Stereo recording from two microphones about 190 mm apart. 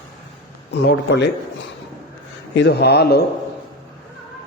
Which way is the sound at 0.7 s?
60° left (ahead or behind).